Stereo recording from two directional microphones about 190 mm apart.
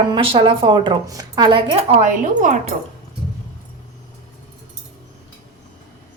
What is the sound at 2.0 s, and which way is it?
Speech, 40° right (ahead or behind).